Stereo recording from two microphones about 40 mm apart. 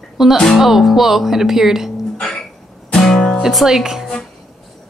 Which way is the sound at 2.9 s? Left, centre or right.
Centre.